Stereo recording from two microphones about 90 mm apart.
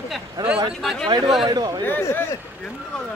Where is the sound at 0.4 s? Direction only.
45° right (ahead or behind).